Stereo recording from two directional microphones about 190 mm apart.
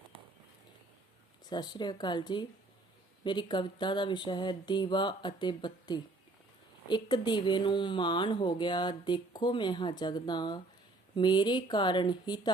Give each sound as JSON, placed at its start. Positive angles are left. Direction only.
{"t": 1.5, "sound": "speech", "side_deg": 20}